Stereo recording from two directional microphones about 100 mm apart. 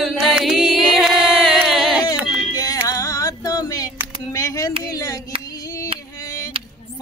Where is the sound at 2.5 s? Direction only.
35° left (ahead or behind).